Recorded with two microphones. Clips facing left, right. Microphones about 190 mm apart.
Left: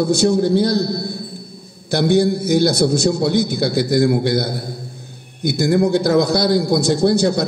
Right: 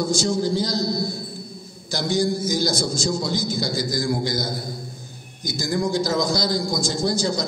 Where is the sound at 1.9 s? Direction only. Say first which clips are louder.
Left 7 dB; 60° left (ahead or behind).